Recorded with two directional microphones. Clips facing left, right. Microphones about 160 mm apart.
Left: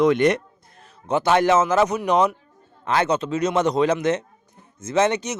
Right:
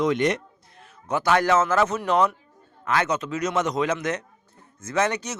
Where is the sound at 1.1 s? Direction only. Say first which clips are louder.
Left 3 dB; 25° left (ahead or behind).